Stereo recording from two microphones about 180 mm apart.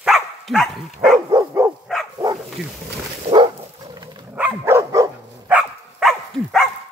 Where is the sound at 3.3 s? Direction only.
25° right (ahead or behind).